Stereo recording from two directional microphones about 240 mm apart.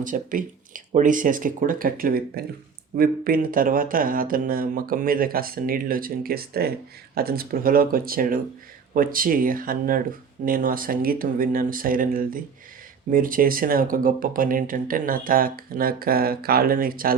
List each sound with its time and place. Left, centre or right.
0.0 s speech: right